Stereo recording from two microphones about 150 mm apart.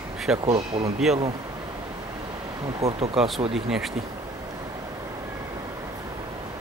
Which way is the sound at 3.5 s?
Centre (ahead or behind).